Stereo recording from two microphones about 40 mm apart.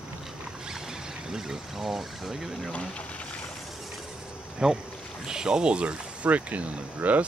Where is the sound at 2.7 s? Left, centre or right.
Left.